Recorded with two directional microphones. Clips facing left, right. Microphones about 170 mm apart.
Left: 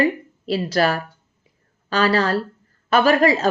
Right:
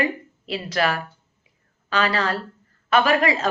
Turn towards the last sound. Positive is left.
turn(degrees=35)  # may be behind; listen again after turning